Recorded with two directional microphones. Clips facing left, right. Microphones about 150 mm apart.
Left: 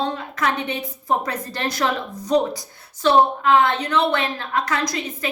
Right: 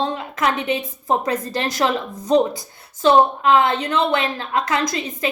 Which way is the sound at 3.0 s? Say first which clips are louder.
Right 2 dB; 20° right (ahead or behind).